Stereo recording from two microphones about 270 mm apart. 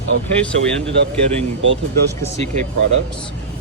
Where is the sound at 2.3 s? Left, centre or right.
Right.